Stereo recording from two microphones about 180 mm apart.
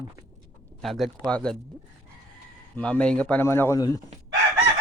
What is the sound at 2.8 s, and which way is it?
Speech, 5° left (ahead or behind).